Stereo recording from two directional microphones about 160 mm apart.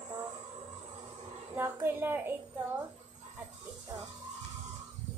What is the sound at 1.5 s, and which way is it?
Speech, 15° right (ahead or behind).